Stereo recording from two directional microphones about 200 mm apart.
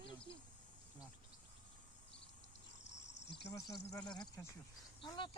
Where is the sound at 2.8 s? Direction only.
60° left (ahead or behind).